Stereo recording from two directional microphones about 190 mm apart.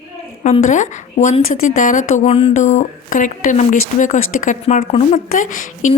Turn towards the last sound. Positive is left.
turn(degrees=40)  # may be behind; listen again after turning